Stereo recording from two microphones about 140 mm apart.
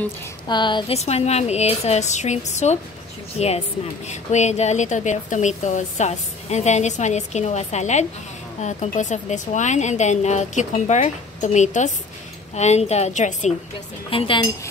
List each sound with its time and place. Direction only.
0.5 s a woman's voice: 35° left (ahead or behind)
0.9 s a woman's voice: 50° left (ahead or behind)
14.1 s a woman's voice: 40° left (ahead or behind)